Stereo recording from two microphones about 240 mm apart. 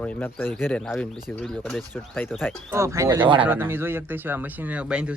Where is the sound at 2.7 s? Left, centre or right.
Centre.